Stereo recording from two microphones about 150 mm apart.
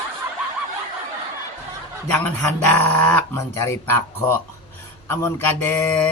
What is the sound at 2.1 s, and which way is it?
Speech, 15° left (ahead or behind).